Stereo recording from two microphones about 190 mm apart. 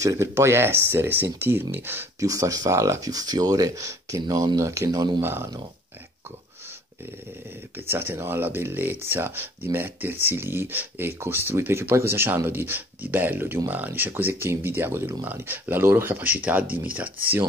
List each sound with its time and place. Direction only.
0.0 s speech: 15° right (ahead or behind)
7.9 s speech: 10° right (ahead or behind)